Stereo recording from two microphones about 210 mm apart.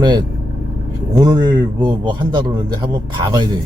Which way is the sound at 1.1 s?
20° right (ahead or behind).